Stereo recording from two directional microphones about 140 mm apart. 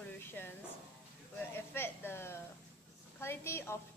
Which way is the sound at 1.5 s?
15° left (ahead or behind).